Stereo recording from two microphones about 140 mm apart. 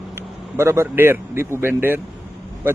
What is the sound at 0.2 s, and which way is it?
A man's voice, 20° right (ahead or behind).